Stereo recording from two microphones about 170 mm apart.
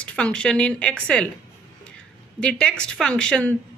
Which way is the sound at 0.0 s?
5° left (ahead or behind).